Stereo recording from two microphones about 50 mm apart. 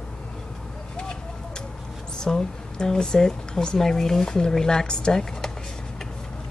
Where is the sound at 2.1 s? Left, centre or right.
Centre.